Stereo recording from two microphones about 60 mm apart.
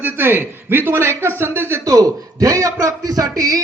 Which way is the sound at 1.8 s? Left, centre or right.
Right.